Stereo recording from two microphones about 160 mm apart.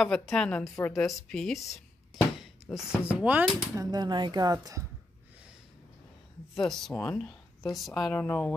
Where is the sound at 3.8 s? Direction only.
25° right (ahead or behind).